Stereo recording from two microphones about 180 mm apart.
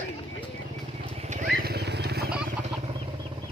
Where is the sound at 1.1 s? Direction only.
40° right (ahead or behind).